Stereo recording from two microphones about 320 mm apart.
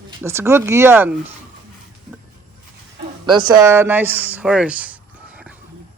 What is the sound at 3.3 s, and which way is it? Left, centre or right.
Speech, centre.